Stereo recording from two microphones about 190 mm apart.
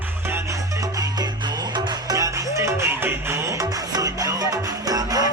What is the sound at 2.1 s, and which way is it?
Music, 15° right (ahead or behind).